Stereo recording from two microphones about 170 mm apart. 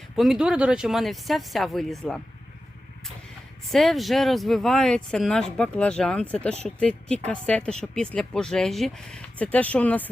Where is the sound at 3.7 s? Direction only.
Centre (ahead or behind).